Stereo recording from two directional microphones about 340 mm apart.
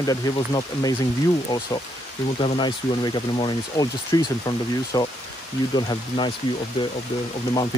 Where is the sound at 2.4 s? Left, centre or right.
Centre.